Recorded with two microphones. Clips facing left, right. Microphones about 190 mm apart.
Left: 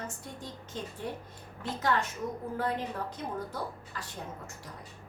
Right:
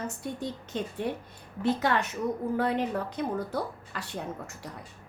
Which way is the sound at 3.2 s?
65° right (ahead or behind).